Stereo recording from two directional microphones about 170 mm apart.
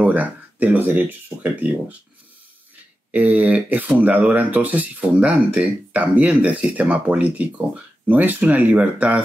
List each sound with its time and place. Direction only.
0.0 s speech: 10° right (ahead or behind)
3.1 s speech: 10° right (ahead or behind)